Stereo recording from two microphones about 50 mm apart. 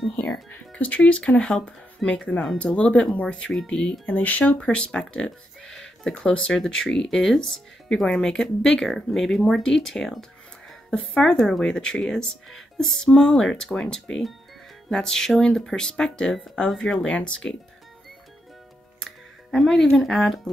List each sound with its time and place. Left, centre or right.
0.5 s speech: left
4.0 s speech: left
4.6 s speech: left
6.1 s speech: left
19.0 s speech: centre